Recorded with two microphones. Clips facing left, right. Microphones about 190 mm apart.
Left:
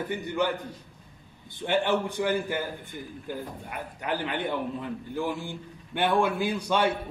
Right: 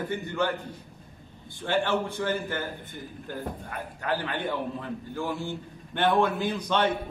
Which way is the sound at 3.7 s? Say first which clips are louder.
Even; 15° left (ahead or behind).